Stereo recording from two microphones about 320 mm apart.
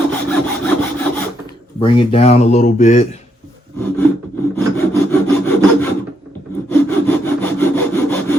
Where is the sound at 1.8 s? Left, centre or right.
Centre.